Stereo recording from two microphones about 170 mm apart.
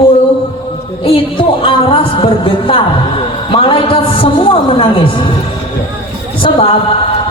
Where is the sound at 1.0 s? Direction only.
30° left (ahead or behind).